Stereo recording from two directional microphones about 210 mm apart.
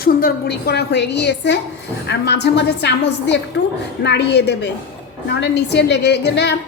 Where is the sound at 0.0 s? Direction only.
45° left (ahead or behind).